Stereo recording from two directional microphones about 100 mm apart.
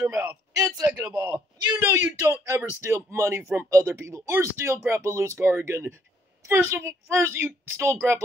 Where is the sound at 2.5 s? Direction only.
25° right (ahead or behind).